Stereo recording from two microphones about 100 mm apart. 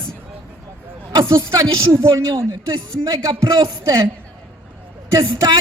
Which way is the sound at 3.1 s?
40° right (ahead or behind).